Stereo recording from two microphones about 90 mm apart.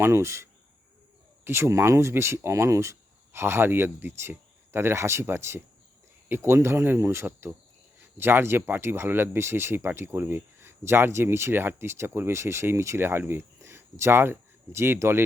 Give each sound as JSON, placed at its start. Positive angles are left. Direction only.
{"t": 0.0, "sound": "speech", "side_deg": -30}
{"t": 1.5, "sound": "speech", "side_deg": -30}